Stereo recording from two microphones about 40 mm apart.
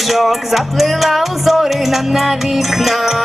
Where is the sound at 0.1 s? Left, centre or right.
Centre.